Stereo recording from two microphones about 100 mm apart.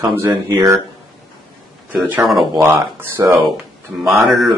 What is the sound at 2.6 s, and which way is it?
Speech, 25° right (ahead or behind).